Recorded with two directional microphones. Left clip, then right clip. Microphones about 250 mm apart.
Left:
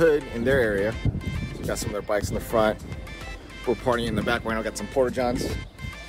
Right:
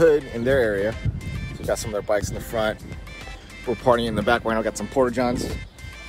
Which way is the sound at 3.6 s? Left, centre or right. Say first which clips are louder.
Right 4 dB; centre.